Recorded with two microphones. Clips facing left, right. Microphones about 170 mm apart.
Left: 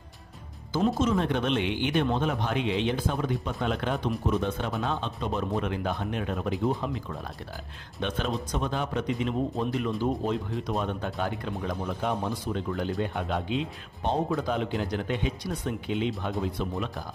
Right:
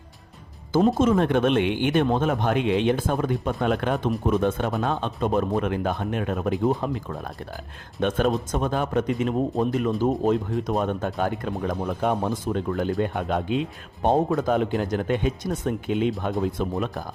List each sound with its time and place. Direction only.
0.7 s speech: 50° right (ahead or behind)